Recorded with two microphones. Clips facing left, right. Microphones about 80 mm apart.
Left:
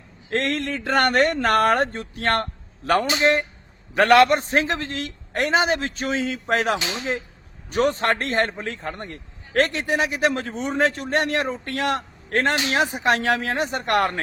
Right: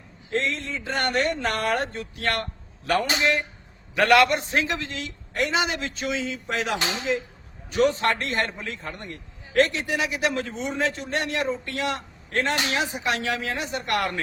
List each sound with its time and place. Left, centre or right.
0.3 s a man's voice: left